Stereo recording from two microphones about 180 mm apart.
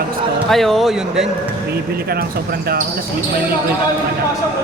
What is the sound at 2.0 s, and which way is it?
Speech, 60° right (ahead or behind).